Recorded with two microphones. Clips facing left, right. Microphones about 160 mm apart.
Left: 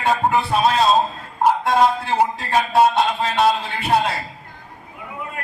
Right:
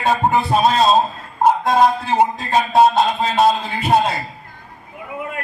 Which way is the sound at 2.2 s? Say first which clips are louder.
Right 2 dB; 20° right (ahead or behind).